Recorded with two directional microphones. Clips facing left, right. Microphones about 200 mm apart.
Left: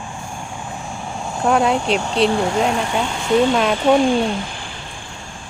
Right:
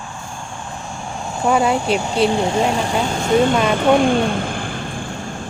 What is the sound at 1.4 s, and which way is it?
Speech, centre (ahead or behind).